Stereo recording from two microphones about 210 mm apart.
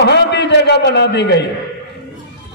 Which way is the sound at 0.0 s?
55° left (ahead or behind).